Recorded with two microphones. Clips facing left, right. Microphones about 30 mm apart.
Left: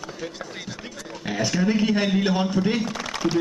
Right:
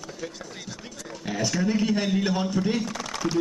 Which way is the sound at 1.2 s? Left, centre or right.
Centre.